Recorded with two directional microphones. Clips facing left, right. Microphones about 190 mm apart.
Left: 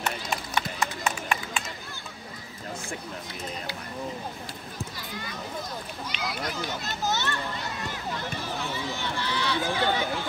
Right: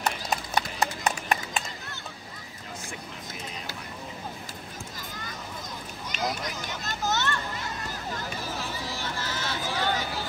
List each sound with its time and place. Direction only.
0.0 s clip-clop: 40° right (ahead or behind)
6.1 s run: 45° right (ahead or behind)
7.0 s children playing: 15° left (ahead or behind)
7.9 s run: 40° right (ahead or behind)
9.6 s run: centre (ahead or behind)